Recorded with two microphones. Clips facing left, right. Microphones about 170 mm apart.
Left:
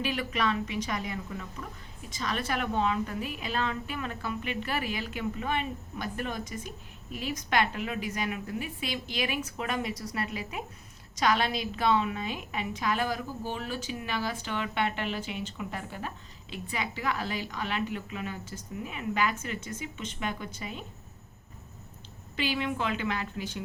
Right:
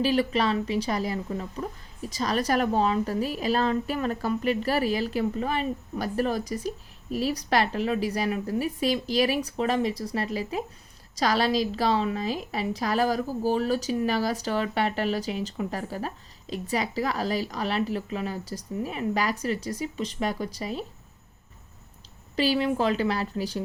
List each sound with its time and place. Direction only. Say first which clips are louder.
0.0 s speech: right 7 dB; 30° right (ahead or behind)
22.4 s speech: right 7 dB; 35° right (ahead or behind)